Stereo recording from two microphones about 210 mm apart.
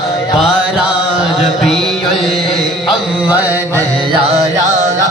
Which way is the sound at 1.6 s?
Centre (ahead or behind).